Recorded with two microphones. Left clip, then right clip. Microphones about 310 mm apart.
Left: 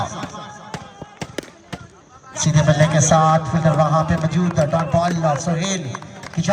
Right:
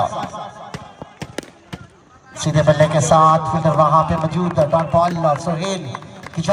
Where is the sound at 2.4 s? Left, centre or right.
Centre.